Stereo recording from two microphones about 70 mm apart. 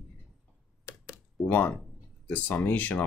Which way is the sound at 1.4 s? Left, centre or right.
Left.